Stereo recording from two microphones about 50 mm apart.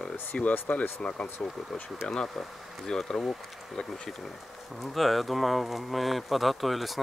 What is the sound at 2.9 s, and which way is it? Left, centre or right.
Speech, centre.